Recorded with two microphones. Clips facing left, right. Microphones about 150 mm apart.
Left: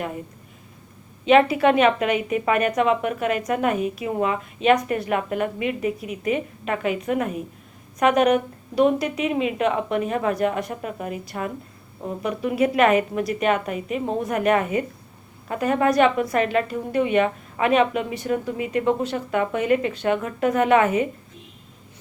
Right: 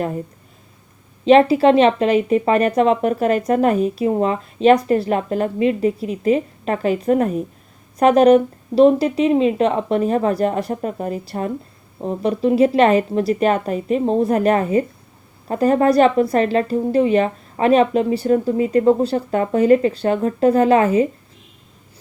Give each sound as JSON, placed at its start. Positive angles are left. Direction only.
{"t": 1.2, "sound": "speech", "side_deg": -35}